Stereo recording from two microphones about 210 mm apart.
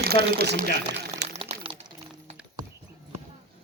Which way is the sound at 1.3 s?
25° right (ahead or behind).